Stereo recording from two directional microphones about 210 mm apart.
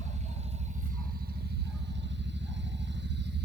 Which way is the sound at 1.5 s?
55° right (ahead or behind).